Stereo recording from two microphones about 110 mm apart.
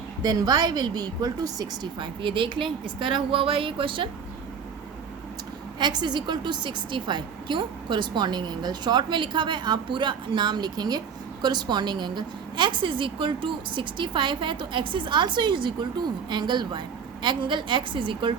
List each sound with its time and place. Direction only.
0.2 s a woman's voice: 35° right (ahead or behind)
5.8 s a woman's voice: 40° right (ahead or behind)